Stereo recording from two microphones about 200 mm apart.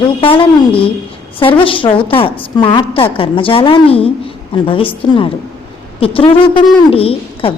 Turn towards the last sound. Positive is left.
turn(degrees=30)  # may be behind; listen again after turning